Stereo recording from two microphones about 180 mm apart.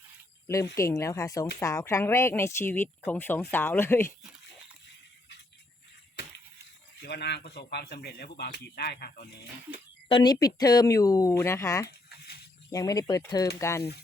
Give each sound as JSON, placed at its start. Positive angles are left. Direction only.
{"t": 0.4, "sound": "speech", "side_deg": 15}
{"t": 7.0, "sound": "speech", "side_deg": 65}
{"t": 10.1, "sound": "speech", "side_deg": 30}
{"t": 11.9, "sound": "a sound", "side_deg": 60}
{"t": 12.7, "sound": "speech", "side_deg": 20}